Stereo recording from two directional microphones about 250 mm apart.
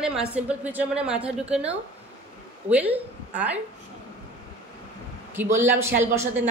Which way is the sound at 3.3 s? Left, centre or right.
Centre.